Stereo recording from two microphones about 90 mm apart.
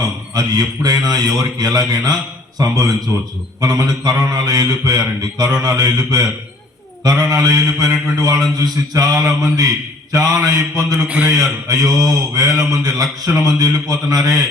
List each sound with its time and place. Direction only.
0.3 s mantra: 45° right (ahead or behind)
3.1 s a man's voice: 30° right (ahead or behind)
3.6 s mantra: 45° right (ahead or behind)
10.1 s a man's voice: 40° right (ahead or behind)